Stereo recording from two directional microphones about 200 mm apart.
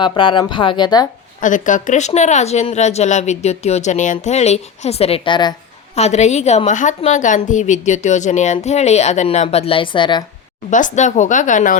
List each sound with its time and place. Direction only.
0.0 s speech: 25° left (ahead or behind)
1.4 s a woman's voice: 40° left (ahead or behind); by 5.5 s 25° left (ahead or behind)
6.0 s a woman's voice: 35° left (ahead or behind)
10.7 s a woman's voice: 40° left (ahead or behind)